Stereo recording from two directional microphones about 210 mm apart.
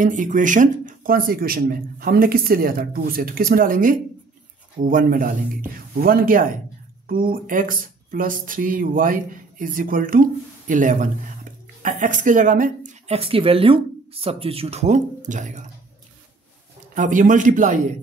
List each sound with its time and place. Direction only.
0.0 s speech: 40° right (ahead or behind)
16.9 s speech: 40° right (ahead or behind)